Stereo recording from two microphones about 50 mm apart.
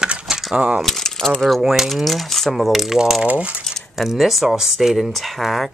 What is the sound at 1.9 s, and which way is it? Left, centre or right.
Speech, centre.